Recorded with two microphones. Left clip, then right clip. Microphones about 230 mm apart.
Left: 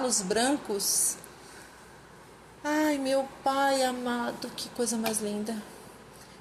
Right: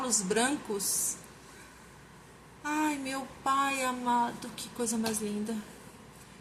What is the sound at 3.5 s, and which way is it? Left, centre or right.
Speech, centre.